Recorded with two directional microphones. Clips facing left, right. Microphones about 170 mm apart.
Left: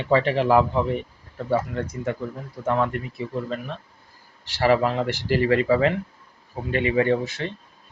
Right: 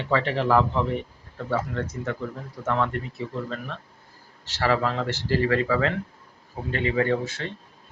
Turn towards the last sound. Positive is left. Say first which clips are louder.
# left 3 dB
turn(degrees=15)  # may be behind; listen again after turning